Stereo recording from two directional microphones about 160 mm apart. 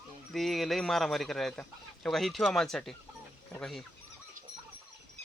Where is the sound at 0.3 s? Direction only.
Centre (ahead or behind).